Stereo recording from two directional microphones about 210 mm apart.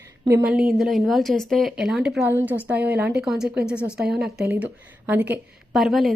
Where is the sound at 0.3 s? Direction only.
10° right (ahead or behind).